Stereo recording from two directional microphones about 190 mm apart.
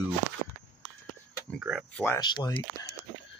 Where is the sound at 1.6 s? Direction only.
5° right (ahead or behind).